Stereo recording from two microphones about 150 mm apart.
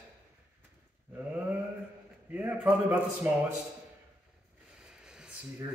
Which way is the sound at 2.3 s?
10° right (ahead or behind).